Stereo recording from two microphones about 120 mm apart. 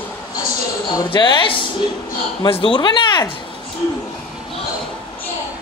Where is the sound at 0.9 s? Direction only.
40° left (ahead or behind).